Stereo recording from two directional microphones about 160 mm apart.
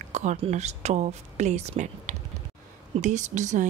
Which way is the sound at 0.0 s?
50° right (ahead or behind).